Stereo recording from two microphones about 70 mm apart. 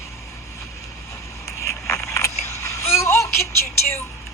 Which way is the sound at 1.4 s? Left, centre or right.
Left.